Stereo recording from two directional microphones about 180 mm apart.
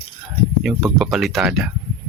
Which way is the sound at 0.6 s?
Centre (ahead or behind).